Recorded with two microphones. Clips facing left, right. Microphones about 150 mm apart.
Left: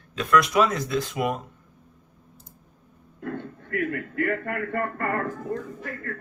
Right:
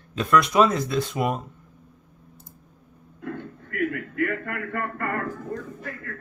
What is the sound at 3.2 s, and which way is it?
A man's voice, 50° left (ahead or behind).